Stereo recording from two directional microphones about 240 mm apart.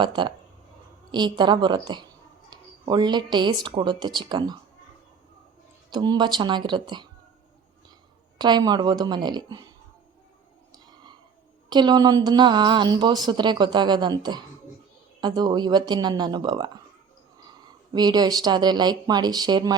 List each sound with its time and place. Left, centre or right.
0.0 s a woman's voice: centre
5.9 s a woman's voice: centre
8.4 s a woman's voice: centre
11.7 s a woman's voice: centre
17.9 s a woman's voice: centre